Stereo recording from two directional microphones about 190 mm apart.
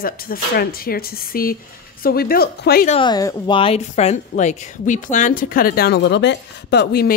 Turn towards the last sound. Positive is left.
turn(degrees=55)  # may be behind; listen again after turning